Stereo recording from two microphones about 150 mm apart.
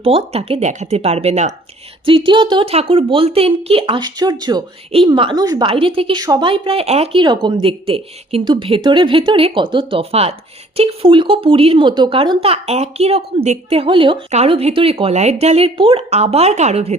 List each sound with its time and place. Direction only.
0.0 s a woman's voice: 40° right (ahead or behind)
2.0 s a woman's voice: 35° right (ahead or behind)